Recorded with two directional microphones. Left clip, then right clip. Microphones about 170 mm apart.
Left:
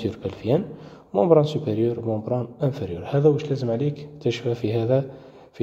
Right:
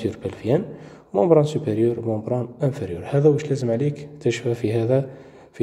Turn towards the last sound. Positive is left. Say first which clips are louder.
# right 1 dB
turn(degrees=-5)  # may be behind; listen again after turning